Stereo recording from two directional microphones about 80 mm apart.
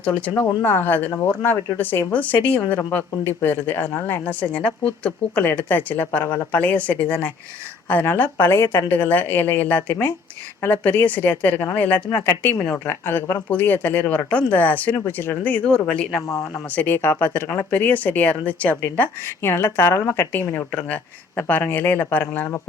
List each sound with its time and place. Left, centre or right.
0.0 s speech: centre
0.6 s speech: left
16.7 s speech: left
19.4 s speech: left